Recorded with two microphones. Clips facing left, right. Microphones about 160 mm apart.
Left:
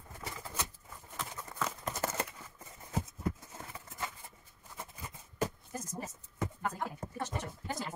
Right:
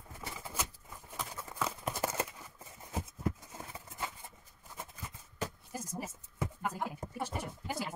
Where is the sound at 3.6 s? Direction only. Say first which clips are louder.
Right 1 dB; 15° right (ahead or behind).